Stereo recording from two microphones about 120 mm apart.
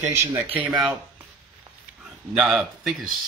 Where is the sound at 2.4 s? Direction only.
5° right (ahead or behind).